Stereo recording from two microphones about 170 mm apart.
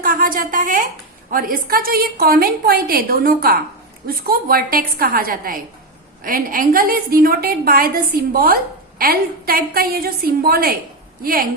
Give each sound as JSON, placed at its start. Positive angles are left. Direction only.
{"t": 0.0, "sound": "a woman's voice", "side_deg": -55}